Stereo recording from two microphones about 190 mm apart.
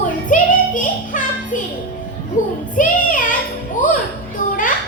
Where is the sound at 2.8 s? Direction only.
45° left (ahead or behind).